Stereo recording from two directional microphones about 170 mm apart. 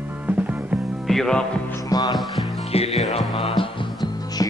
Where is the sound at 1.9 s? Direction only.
25° left (ahead or behind).